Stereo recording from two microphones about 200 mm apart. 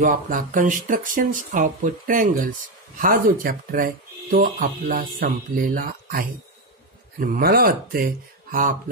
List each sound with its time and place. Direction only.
0.0 s speech: 45° right (ahead or behind)